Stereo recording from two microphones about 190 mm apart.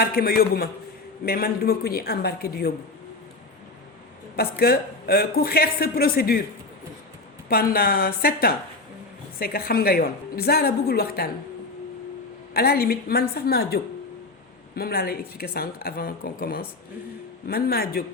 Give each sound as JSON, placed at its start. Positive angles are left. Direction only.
{"t": 0.0, "sound": "speech", "side_deg": 55}
{"t": 4.4, "sound": "speech", "side_deg": 55}
{"t": 7.4, "sound": "speech", "side_deg": 50}
{"t": 12.5, "sound": "a woman's voice", "side_deg": 55}